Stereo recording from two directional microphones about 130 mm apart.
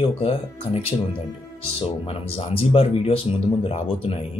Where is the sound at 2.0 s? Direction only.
45° left (ahead or behind).